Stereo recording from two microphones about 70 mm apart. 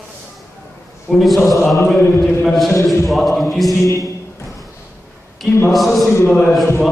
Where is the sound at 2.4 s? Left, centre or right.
Centre.